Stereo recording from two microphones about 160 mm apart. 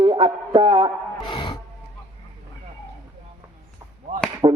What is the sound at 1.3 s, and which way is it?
Music, 30° left (ahead or behind).